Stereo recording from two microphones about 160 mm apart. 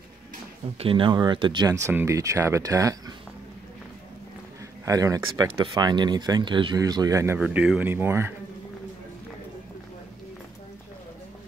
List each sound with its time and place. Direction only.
0.7 s speech: 35° right (ahead or behind)
1.7 s speech: 15° right (ahead or behind)
4.8 s speech: 20° right (ahead or behind)
7.3 s speech: 5° right (ahead or behind)